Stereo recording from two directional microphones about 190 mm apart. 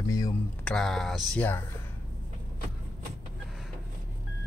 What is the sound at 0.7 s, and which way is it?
Speech, centre (ahead or behind).